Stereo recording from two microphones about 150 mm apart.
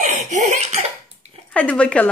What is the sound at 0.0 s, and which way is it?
Laughter, 50° right (ahead or behind).